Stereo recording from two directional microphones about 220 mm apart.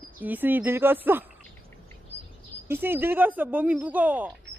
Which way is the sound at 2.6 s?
10° right (ahead or behind).